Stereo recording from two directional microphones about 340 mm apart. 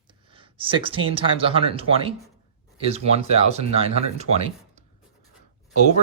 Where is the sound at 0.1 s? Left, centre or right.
Centre.